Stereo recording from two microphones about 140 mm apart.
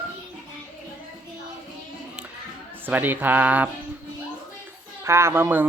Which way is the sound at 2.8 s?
15° right (ahead or behind).